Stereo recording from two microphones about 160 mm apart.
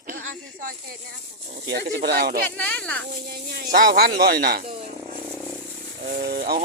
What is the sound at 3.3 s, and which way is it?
Speech, 80° right.